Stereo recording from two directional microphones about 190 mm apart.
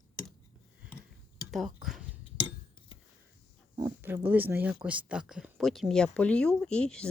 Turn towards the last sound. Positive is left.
turn(degrees=5)  # may be behind; listen again after turning